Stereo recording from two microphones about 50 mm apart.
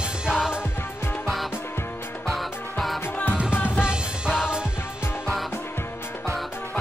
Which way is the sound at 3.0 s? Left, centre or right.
Left.